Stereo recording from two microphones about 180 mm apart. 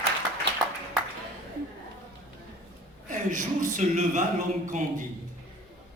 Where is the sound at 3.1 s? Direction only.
45° right (ahead or behind).